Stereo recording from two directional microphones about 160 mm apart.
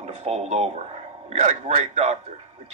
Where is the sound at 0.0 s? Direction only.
40° right (ahead or behind).